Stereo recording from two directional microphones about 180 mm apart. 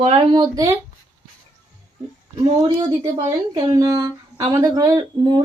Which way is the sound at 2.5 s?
25° right (ahead or behind).